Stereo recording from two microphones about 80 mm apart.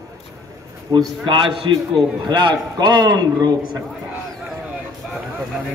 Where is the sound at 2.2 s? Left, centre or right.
Right.